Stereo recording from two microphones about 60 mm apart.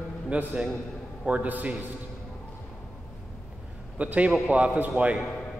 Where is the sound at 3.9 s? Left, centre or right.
Right.